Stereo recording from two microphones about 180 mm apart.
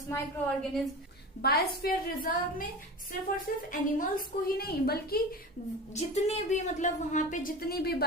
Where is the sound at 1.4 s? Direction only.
60° left (ahead or behind).